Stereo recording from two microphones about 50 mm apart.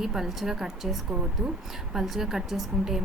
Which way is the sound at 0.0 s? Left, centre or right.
Centre.